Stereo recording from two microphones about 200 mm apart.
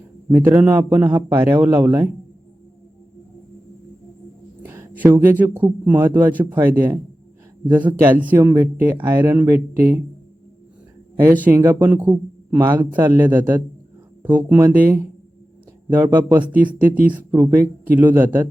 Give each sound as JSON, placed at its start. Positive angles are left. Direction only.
{"t": 0.3, "sound": "speech", "side_deg": -10}
{"t": 4.6, "sound": "speech", "side_deg": -10}
{"t": 11.4, "sound": "speech", "side_deg": -10}